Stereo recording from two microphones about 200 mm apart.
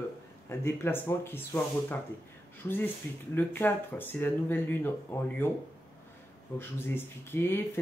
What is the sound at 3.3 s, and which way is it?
Speech, 10° left (ahead or behind).